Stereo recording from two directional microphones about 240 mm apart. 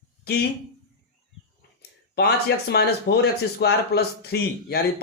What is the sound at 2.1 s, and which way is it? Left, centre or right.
Speech, left.